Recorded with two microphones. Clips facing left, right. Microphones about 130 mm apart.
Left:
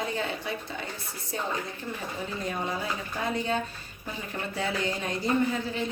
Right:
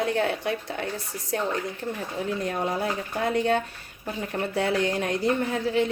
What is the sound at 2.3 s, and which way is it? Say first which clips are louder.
Speech: right 5 dB; 65° right (ahead or behind).